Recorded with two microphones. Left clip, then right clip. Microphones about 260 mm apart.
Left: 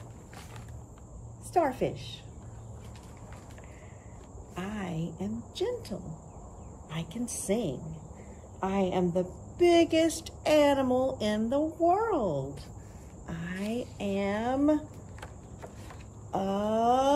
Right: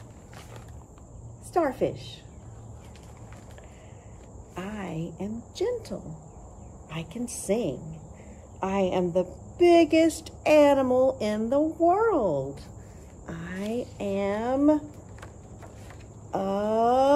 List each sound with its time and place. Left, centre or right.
1.5 s speech: centre
4.6 s speech: centre
7.2 s a woman's voice: centre
16.3 s speech: centre